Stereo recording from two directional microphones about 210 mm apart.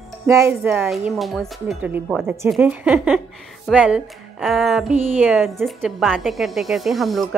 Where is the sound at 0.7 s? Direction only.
Centre (ahead or behind).